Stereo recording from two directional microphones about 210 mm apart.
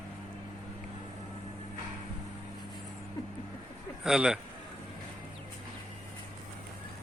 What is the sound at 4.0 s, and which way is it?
Speech, centre (ahead or behind).